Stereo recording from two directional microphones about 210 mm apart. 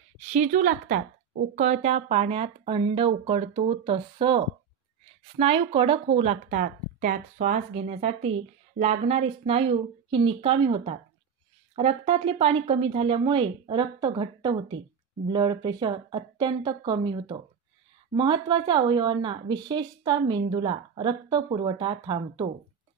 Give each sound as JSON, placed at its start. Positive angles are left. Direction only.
{"t": 0.2, "sound": "a woman's voice", "side_deg": -35}
{"t": 5.4, "sound": "a woman's voice", "side_deg": -25}